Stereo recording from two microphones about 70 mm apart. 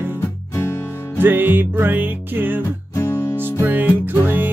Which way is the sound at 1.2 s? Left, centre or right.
Right.